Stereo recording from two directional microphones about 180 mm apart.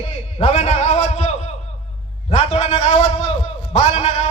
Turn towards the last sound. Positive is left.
turn(degrees=35)  # may be behind; listen again after turning